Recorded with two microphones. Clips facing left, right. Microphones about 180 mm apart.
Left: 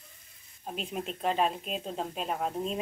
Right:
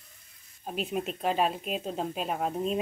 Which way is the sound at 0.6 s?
5° right (ahead or behind).